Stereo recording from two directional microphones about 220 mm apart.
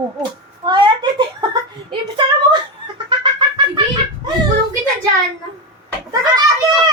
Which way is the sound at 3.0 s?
20° right (ahead or behind).